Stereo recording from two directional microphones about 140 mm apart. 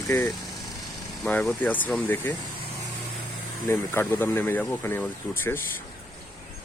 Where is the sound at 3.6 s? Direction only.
15° left (ahead or behind).